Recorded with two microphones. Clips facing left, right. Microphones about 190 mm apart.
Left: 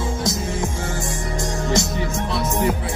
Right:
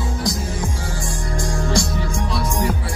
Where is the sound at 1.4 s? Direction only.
20° left (ahead or behind).